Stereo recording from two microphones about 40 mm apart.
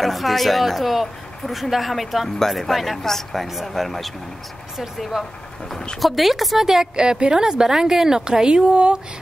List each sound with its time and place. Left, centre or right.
0.0 s a woman's voice: centre; by 9.0 s right